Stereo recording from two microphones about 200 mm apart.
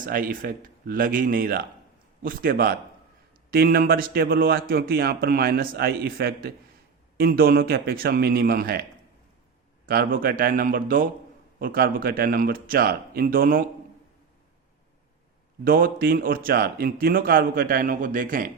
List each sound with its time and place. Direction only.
0.0 s a man's voice: 45° right (ahead or behind)
15.6 s a man's voice: 45° right (ahead or behind)